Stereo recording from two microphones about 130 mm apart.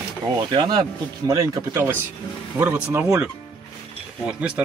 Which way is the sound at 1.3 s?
25° right (ahead or behind).